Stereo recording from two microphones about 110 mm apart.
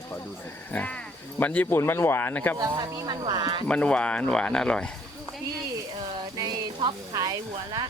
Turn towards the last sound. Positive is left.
turn(degrees=-35)  # may be behind; listen again after turning